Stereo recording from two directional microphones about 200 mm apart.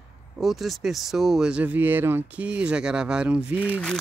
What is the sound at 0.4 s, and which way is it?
Speech, centre (ahead or behind).